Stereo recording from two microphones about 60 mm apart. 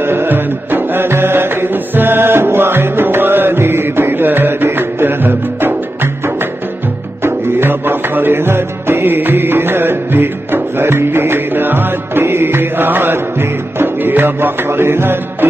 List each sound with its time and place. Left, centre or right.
0.0 s music: right
7.2 s music: right